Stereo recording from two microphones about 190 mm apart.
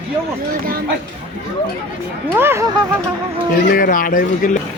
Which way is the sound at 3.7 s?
45° left (ahead or behind).